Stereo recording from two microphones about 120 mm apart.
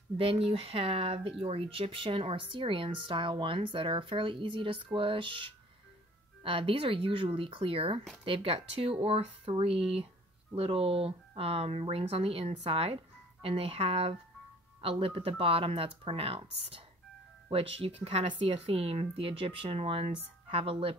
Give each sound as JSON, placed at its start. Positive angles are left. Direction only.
{"t": 0.2, "sound": "speech", "side_deg": -50}